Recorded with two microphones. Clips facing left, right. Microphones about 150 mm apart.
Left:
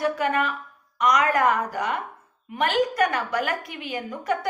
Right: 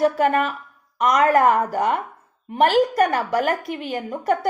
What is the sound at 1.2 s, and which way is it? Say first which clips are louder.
Speech: right 5 dB; 40° right (ahead or behind).